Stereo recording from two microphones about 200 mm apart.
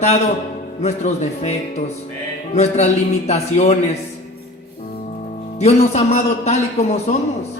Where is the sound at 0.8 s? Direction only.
35° left (ahead or behind).